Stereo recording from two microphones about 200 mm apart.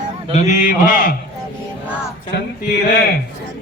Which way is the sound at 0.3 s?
35° left (ahead or behind).